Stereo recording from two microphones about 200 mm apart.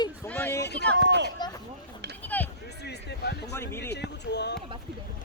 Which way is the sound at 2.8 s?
55° left (ahead or behind).